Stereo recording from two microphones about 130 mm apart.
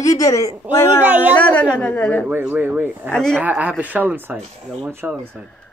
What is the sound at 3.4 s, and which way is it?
Speech, 10° right (ahead or behind).